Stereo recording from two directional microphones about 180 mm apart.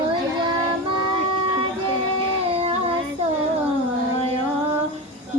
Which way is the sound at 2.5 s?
35° right (ahead or behind).